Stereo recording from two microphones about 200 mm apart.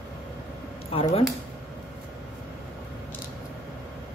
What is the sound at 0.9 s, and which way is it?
Speech, 30° left (ahead or behind).